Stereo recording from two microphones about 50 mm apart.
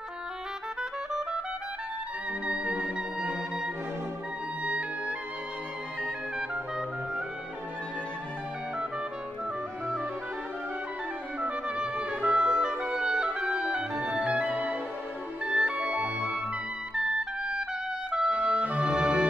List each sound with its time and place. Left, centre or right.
2.4 s music: right
11.4 s clarinet: right
14.0 s music: right
18.3 s music: right